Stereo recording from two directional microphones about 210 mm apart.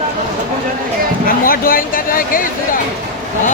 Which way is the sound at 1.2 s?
45° left (ahead or behind).